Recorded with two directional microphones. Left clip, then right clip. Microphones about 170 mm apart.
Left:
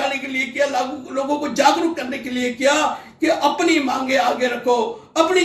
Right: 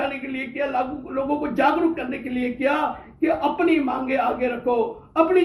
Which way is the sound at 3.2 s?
15° left (ahead or behind).